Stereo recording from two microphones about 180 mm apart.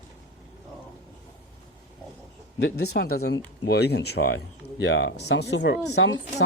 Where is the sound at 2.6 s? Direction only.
65° left (ahead or behind).